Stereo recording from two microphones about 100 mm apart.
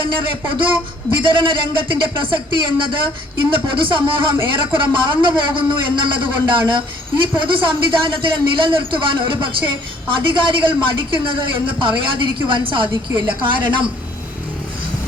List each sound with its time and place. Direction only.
0.0 s a man's voice: 60° right (ahead or behind)